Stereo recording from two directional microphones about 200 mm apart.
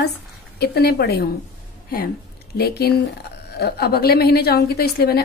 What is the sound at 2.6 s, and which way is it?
A woman's voice, 50° left (ahead or behind).